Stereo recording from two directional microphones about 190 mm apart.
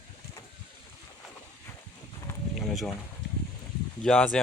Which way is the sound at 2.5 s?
Centre (ahead or behind).